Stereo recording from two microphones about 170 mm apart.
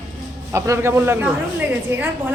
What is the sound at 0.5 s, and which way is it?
Speech, 15° right (ahead or behind).